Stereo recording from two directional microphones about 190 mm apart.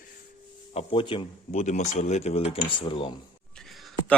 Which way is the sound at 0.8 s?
25° left (ahead or behind).